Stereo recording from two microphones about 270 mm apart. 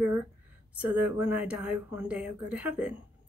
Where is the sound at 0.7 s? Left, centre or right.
Centre.